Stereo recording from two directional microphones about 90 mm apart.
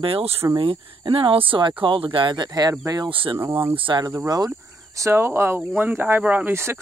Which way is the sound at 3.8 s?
60° right (ahead or behind).